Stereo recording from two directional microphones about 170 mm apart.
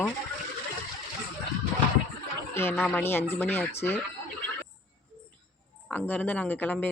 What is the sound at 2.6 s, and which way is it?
Speech, 15° left (ahead or behind).